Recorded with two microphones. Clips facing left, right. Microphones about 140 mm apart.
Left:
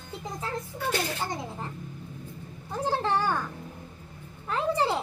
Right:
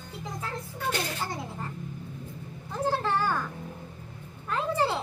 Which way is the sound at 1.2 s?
20° left (ahead or behind).